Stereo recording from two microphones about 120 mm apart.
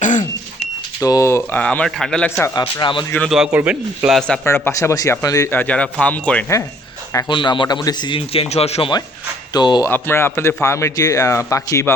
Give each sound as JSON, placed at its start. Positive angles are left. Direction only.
{"t": 0.0, "sound": "a sound", "side_deg": 90}
{"t": 1.0, "sound": "speech", "side_deg": 30}
{"t": 2.6, "sound": "speech", "side_deg": 40}
{"t": 3.2, "sound": "a man's voice", "side_deg": -5}
{"t": 4.4, "sound": "speech", "side_deg": 20}
{"t": 5.5, "sound": "speech", "side_deg": 15}
{"t": 7.3, "sound": "a man's voice", "side_deg": 40}
{"t": 9.5, "sound": "speech", "side_deg": 35}
{"t": 9.8, "sound": "speech", "side_deg": 20}